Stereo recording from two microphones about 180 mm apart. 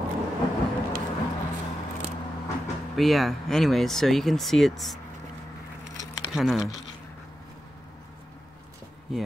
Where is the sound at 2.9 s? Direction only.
Centre (ahead or behind).